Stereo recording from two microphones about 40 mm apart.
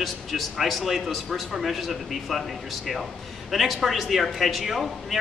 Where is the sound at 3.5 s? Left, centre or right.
Centre.